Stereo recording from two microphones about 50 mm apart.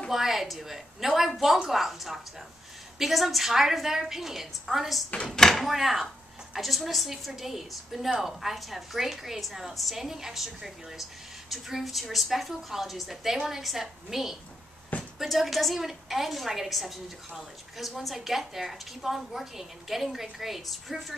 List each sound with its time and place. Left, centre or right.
0.1 s a woman's voice: centre
5.2 s speech: centre
5.7 s a woman's voice: centre